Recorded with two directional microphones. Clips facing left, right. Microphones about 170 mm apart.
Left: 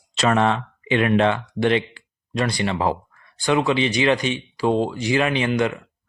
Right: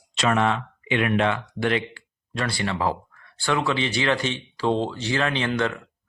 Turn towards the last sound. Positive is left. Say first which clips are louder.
# left 3 dB
turn(degrees=15)  # may be behind; listen again after turning